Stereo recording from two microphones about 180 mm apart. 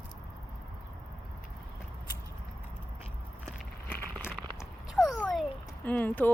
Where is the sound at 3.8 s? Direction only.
10° left (ahead or behind).